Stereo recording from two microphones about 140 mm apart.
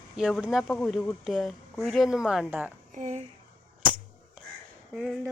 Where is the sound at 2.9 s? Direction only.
55° right (ahead or behind).